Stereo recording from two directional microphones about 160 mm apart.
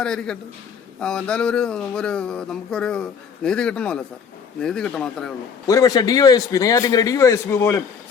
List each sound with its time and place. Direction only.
0.0 s speech: 5° left (ahead or behind)
5.6 s a man's voice: 20° left (ahead or behind)